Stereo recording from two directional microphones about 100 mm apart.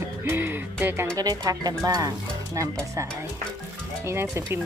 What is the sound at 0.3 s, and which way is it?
Music, 20° right (ahead or behind).